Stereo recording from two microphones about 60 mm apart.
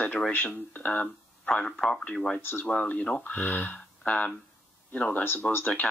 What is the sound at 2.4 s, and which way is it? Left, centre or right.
Speech, left.